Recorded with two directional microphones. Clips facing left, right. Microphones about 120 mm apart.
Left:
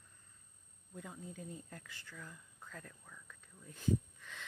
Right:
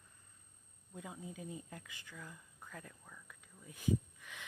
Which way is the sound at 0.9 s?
15° right (ahead or behind).